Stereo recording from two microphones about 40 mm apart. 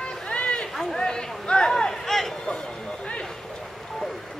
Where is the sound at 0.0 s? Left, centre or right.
Left.